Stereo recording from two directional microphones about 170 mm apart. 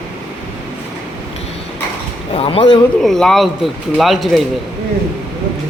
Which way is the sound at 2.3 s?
35° left (ahead or behind).